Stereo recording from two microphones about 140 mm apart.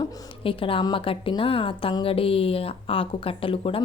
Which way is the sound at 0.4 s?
40° left (ahead or behind).